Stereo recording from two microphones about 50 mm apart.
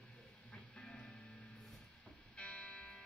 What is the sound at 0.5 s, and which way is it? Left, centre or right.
Music, centre.